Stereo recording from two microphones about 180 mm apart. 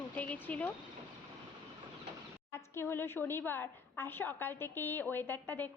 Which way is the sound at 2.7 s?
15° left (ahead or behind).